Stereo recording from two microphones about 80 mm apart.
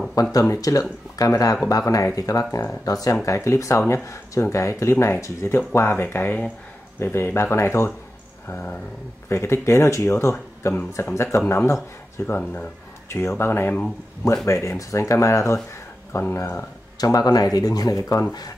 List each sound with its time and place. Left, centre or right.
0.1 s speech: left; by 6.5 s centre
7.0 s speech: left
9.3 s speech: left
14.4 s speech: left
17.0 s speech: left